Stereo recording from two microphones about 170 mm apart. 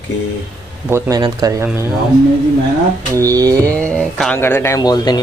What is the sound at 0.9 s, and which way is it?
Speech, 20° right (ahead or behind).